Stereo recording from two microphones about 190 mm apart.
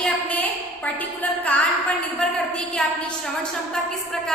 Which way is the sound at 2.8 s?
Centre (ahead or behind).